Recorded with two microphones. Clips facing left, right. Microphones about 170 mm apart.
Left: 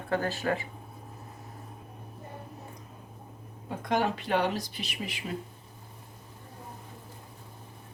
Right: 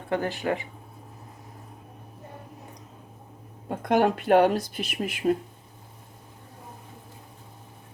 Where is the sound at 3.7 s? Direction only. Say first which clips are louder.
Right 6 dB; 55° right (ahead or behind).